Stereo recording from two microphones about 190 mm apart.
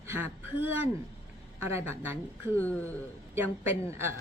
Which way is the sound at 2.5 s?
10° left (ahead or behind).